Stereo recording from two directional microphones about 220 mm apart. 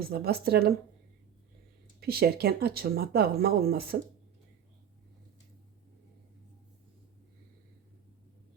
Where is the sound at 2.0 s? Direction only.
45° right (ahead or behind).